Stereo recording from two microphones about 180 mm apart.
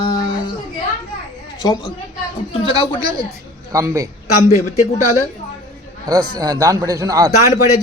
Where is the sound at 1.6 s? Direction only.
20° left (ahead or behind).